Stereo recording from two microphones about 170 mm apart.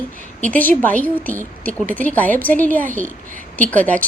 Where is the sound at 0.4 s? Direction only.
10° left (ahead or behind).